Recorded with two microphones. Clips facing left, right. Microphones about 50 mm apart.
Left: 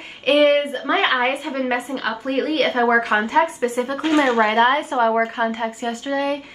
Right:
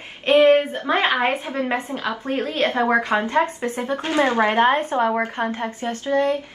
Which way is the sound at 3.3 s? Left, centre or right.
Centre.